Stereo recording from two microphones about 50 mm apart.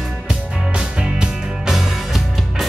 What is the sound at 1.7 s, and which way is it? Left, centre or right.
Music, centre.